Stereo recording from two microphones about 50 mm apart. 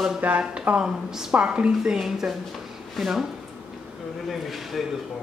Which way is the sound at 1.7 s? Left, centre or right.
Centre.